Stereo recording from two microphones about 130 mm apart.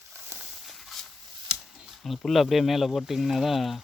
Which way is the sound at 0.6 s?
Centre (ahead or behind).